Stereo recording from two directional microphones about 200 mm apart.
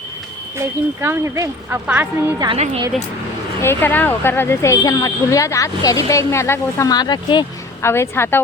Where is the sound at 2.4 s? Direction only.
30° right (ahead or behind).